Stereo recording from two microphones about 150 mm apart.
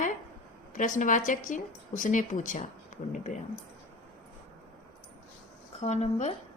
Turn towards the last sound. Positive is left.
turn(degrees=50)  # may be behind; listen again after turning